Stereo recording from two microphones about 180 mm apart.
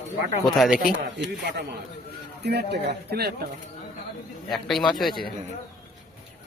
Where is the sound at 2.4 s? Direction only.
70° right (ahead or behind).